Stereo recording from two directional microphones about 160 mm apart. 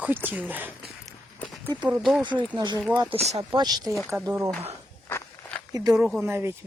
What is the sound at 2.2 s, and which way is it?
Speech, 30° right (ahead or behind).